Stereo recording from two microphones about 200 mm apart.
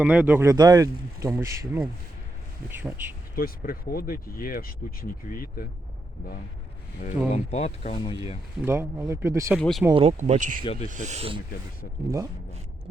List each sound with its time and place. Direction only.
0.0 s speech: 5° right (ahead or behind)
3.3 s speech: 45° left (ahead or behind)
7.3 s speech: 35° left (ahead or behind)
8.6 s speech: 10° right (ahead or behind)
9.6 s speech: 5° left (ahead or behind)
9.9 s speech: 30° right (ahead or behind)
10.6 s speech: 30° left (ahead or behind)
10.9 s speech: 35° right (ahead or behind)
12.0 s speech: 15° right (ahead or behind)